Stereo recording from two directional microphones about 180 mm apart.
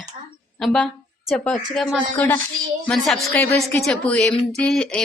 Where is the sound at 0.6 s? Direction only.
5° left (ahead or behind).